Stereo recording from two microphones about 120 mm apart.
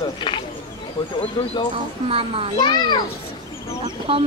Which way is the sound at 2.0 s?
50° right (ahead or behind).